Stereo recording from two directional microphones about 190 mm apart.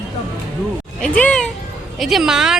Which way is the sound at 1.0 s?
5° left (ahead or behind).